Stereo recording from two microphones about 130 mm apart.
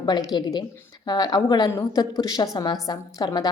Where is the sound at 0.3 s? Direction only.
30° left (ahead or behind).